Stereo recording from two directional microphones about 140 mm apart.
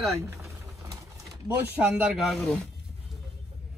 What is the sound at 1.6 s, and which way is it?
Speech, 10° right (ahead or behind).